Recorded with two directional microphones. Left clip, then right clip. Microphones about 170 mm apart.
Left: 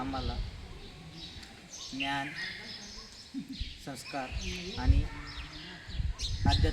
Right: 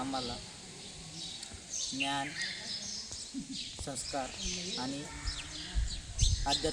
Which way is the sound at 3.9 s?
5° right (ahead or behind).